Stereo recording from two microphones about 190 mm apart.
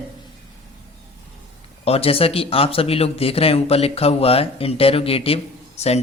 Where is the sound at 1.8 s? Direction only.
30° left (ahead or behind).